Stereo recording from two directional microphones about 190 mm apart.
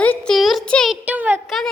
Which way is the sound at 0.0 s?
5° left (ahead or behind).